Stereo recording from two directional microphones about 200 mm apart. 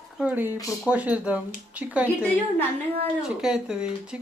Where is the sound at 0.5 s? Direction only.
15° left (ahead or behind).